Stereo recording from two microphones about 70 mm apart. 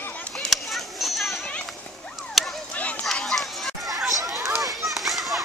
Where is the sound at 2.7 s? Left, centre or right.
Centre.